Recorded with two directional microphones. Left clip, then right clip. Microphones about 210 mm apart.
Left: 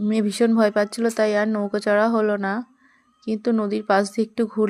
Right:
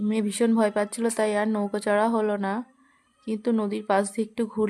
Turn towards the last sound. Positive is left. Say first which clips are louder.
# left 5 dB
turn(degrees=10)  # may be behind; listen again after turning